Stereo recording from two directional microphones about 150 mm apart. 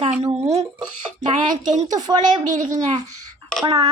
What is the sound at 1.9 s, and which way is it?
Speech, 30° right (ahead or behind).